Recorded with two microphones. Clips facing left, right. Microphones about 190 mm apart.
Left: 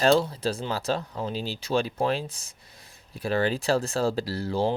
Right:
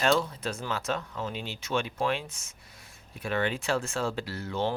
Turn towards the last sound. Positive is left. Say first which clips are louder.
# left 5 dB
turn(degrees=35)  # may be behind; listen again after turning